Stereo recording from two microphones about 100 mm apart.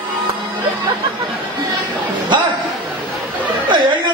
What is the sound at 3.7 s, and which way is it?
Speech, 50° right (ahead or behind).